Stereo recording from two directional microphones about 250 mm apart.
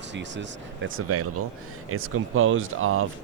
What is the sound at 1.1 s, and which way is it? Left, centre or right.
Speech, right.